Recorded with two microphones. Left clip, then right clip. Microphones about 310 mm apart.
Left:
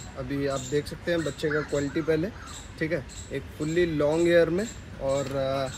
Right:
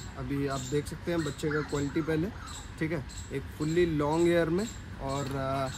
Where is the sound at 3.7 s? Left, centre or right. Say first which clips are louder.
Left 3 dB; right.